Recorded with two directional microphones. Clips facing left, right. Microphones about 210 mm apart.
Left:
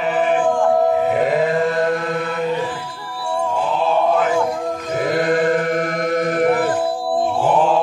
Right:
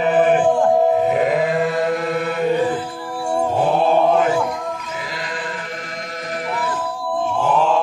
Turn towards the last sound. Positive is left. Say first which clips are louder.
# left 8 dB
turn(degrees=55)  # may be behind; listen again after turning